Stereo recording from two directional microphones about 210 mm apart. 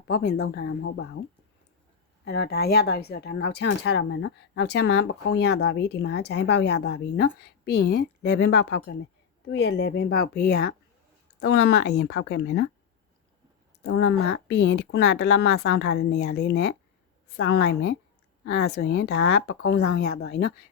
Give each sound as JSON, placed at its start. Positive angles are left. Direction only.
{"t": 0.1, "sound": "speech", "side_deg": 50}
{"t": 2.2, "sound": "speech", "side_deg": 50}
{"t": 13.8, "sound": "speech", "side_deg": 55}